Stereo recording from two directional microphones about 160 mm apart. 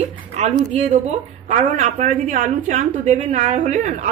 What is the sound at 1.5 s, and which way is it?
A woman's voice, 50° right (ahead or behind).